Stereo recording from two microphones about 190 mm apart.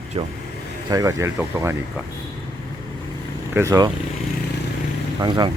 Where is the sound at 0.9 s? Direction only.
20° right (ahead or behind).